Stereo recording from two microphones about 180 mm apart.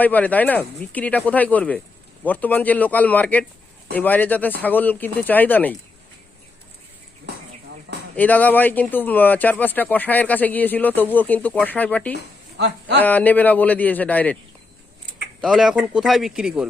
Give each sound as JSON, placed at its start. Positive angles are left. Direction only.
{"t": 0.0, "sound": "speech", "side_deg": 10}
{"t": 8.1, "sound": "speech", "side_deg": 10}
{"t": 12.5, "sound": "speech", "side_deg": -70}
{"t": 13.0, "sound": "speech", "side_deg": 10}
{"t": 15.4, "sound": "speech", "side_deg": 0}